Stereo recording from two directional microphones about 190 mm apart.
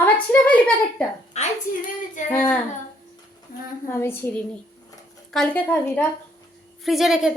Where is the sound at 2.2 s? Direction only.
40° left (ahead or behind).